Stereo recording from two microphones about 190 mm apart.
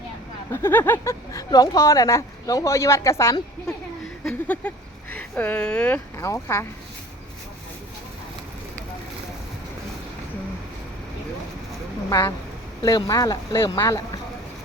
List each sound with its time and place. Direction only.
0.5 s speech: 10° left (ahead or behind)
12.0 s speech: 20° left (ahead or behind)